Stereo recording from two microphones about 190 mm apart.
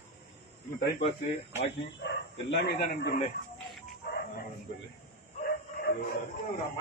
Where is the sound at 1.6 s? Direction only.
65° left (ahead or behind).